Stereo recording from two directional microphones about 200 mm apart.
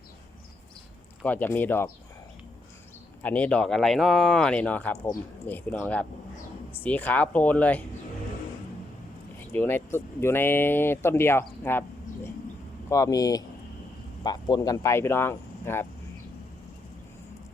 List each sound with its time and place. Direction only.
1.2 s speech: 10° left (ahead or behind)
3.2 s speech: 5° left (ahead or behind)
9.5 s speech: 10° left (ahead or behind)